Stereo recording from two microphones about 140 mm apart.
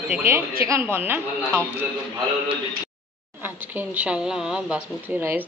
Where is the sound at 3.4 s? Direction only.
15° right (ahead or behind).